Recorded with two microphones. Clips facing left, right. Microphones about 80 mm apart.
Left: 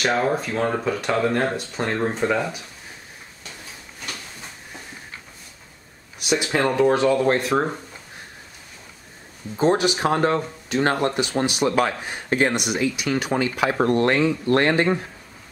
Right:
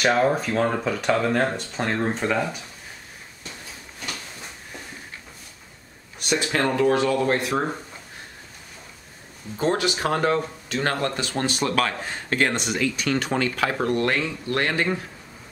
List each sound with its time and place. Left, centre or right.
0.0 s speech: centre
6.1 s speech: centre
6.9 s speech: left
9.6 s speech: left
13.7 s speech: left